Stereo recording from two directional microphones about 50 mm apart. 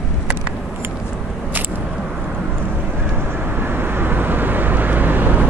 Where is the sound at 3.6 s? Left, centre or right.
Right.